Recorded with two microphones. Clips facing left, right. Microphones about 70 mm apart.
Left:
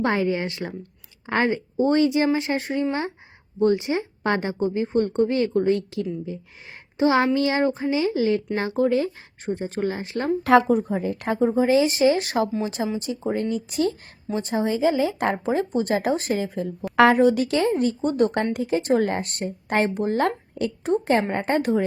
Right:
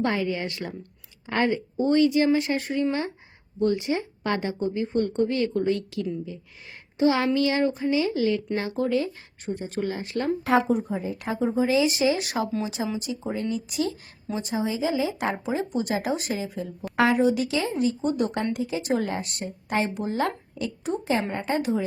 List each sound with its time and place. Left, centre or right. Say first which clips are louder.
0.0 s a woman's voice: left 3 dB; left
10.4 s a woman's voice: left 6 dB; left
10.7 s speech: left 4 dB; left